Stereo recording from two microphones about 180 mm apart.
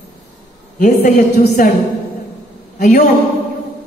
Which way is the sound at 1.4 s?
45° left (ahead or behind).